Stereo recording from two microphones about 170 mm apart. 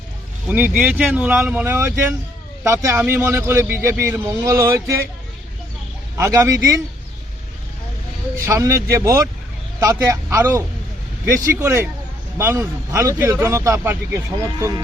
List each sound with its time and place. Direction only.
0.4 s speech: 10° right (ahead or behind)
6.1 s speech: 15° right (ahead or behind)
8.4 s speech: 20° right (ahead or behind)
11.6 s speech: 15° right (ahead or behind)